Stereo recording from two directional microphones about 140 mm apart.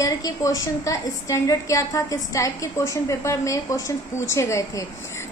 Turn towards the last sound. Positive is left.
turn(degrees=20)  # may be behind; listen again after turning